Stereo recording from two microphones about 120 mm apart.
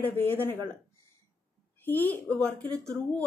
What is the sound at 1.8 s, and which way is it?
Speech, 15° left (ahead or behind).